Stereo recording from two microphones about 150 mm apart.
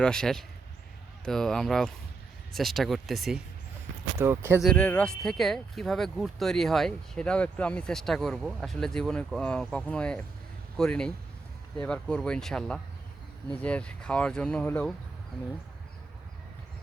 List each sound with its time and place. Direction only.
0.0 s speech: 5° left (ahead or behind)
4.2 s speech: 15° right (ahead or behind)
4.6 s speech: 10° left (ahead or behind)